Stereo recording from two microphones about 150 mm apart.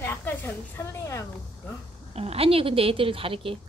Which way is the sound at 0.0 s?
15° left (ahead or behind).